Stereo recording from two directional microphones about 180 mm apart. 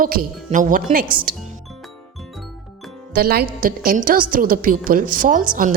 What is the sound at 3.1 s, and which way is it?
A woman's voice, 55° right (ahead or behind).